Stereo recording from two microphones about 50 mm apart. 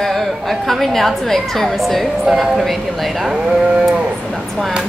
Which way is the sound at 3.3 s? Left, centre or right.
Centre.